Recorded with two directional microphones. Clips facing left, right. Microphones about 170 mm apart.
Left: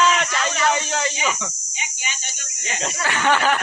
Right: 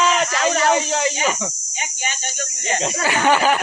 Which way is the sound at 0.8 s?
Centre (ahead or behind).